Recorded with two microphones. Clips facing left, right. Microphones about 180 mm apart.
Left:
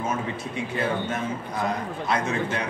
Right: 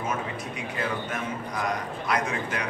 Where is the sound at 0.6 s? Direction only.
25° left (ahead or behind).